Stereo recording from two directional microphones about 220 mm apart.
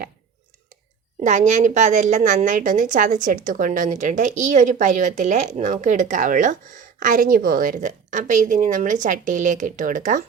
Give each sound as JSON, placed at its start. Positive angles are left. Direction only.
{"t": 1.2, "sound": "a woman's voice", "side_deg": -35}